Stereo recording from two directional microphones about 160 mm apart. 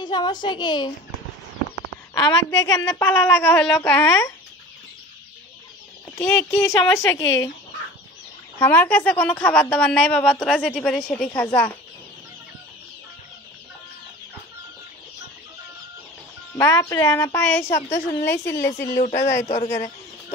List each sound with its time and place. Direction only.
0.0 s a woman's voice: 25° left (ahead or behind)
2.1 s a woman's voice: 20° left (ahead or behind)
6.1 s a woman's voice: 15° left (ahead or behind)
8.5 s a woman's voice: 10° left (ahead or behind)
16.5 s a woman's voice: 15° left (ahead or behind)
19.4 s speech: 40° left (ahead or behind)